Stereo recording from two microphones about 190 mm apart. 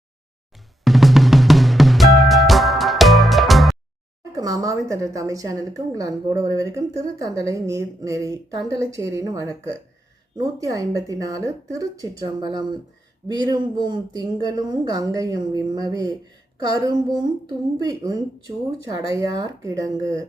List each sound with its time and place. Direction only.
0.9 s drum: centre (ahead or behind)
4.4 s a woman's voice: 20° right (ahead or behind)